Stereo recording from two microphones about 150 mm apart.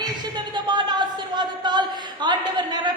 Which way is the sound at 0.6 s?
30° right (ahead or behind).